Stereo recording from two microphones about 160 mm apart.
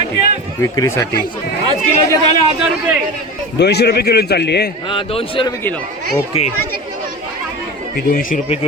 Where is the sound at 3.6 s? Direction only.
90° left.